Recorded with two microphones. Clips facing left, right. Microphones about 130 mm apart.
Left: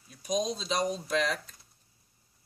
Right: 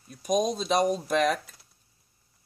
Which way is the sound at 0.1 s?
55° right (ahead or behind).